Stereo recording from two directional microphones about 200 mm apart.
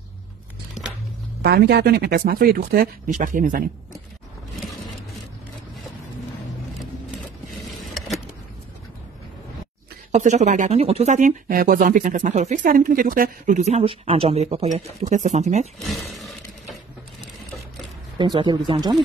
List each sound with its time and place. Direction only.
1.4 s speech: 55° right (ahead or behind)
10.1 s speech: 35° right (ahead or behind)
18.1 s speech: 20° right (ahead or behind)